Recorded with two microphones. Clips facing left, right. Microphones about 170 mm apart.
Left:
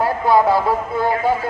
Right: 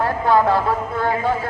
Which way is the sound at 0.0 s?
10° left (ahead or behind).